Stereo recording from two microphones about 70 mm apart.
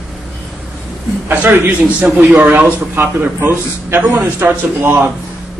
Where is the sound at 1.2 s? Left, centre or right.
Right.